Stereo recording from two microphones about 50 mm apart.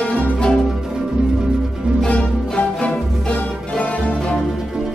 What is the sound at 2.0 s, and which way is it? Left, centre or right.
Music, left.